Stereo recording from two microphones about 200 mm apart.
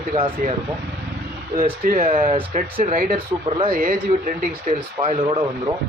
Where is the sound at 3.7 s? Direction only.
45° right (ahead or behind).